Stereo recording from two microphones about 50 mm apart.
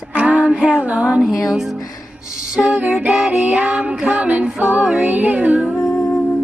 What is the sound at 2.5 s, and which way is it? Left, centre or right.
Music, right.